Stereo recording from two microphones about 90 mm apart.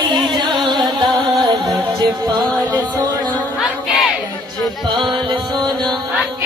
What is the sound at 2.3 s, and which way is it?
Music, centre (ahead or behind).